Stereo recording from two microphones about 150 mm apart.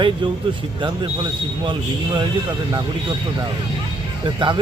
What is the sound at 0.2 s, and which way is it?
Speech, 30° right (ahead or behind).